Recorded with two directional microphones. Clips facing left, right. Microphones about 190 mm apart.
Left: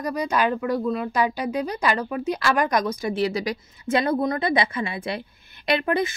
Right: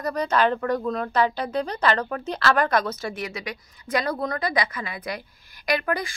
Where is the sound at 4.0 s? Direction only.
20° left (ahead or behind).